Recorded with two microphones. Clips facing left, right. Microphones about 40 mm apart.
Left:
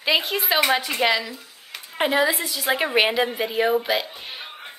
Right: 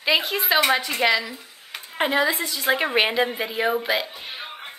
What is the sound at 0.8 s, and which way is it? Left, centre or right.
A woman's voice, centre.